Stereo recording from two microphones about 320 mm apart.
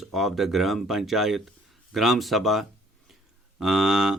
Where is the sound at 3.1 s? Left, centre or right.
Centre.